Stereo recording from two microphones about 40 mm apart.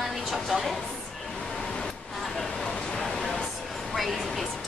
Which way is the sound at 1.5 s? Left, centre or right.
Centre.